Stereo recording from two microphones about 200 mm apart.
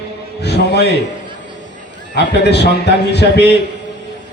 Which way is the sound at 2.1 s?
55° left (ahead or behind).